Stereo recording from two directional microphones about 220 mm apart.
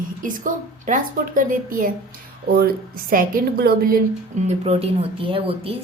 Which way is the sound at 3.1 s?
40° right (ahead or behind).